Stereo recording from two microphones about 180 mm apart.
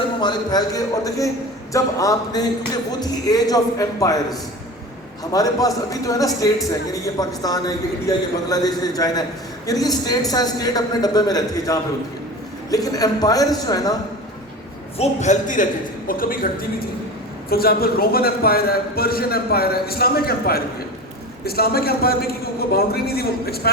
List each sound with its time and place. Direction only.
0.2 s a man's voice: 25° left (ahead or behind)
14.9 s a man's voice: 40° left (ahead or behind)
17.5 s a man's voice: 55° left (ahead or behind)